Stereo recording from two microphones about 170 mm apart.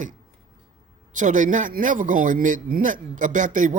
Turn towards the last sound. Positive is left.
turn(degrees=-50)  # may be behind; listen again after turning